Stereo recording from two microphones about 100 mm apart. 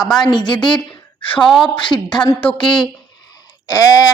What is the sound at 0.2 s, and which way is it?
Speech, 50° left (ahead or behind).